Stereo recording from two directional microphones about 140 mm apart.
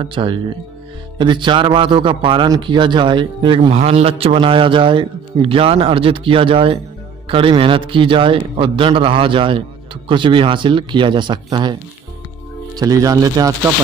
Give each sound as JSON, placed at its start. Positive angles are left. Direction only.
{"t": 0.0, "sound": "a man's voice", "side_deg": -35}
{"t": 3.7, "sound": "a man's voice", "side_deg": -45}
{"t": 12.7, "sound": "speech", "side_deg": -25}